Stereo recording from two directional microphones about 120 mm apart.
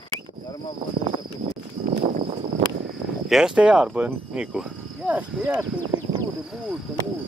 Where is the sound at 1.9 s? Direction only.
90° right.